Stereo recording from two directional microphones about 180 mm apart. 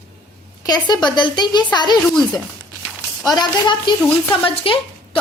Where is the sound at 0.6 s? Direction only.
25° left (ahead or behind).